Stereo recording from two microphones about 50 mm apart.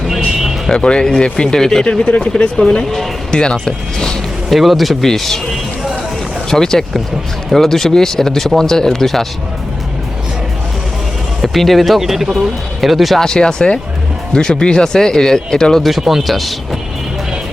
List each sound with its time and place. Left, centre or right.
0.7 s speech: centre
1.9 s speech: left
4.4 s speech: centre
6.5 s speech: centre
11.4 s speech: centre
13.1 s speech: centre
15.8 s speech: centre